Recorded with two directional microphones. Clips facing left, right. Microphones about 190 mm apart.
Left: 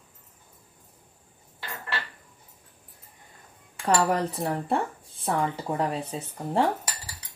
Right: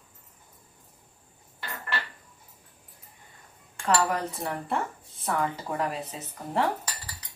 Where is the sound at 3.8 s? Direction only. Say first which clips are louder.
Left 2 dB; 30° left (ahead or behind).